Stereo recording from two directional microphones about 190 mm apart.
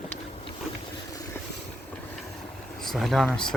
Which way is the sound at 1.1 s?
20° left (ahead or behind).